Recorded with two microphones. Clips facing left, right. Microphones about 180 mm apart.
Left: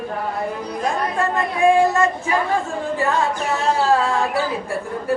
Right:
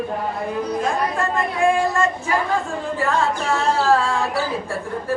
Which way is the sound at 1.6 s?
20° left (ahead or behind).